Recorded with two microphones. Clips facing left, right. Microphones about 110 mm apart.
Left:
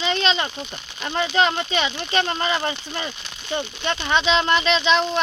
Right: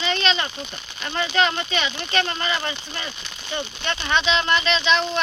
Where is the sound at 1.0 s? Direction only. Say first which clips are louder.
Left 2 dB; 20° left (ahead or behind).